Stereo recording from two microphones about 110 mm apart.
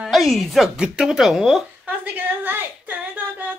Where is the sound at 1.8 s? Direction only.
15° right (ahead or behind).